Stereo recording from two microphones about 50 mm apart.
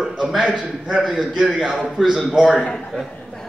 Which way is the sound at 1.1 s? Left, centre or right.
Centre.